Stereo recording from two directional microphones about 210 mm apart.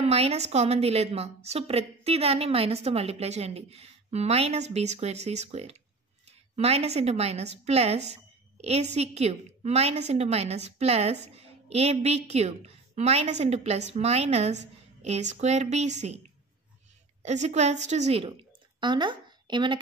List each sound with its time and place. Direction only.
0.0 s a woman's voice: 30° right (ahead or behind)
17.2 s a woman's voice: 35° right (ahead or behind)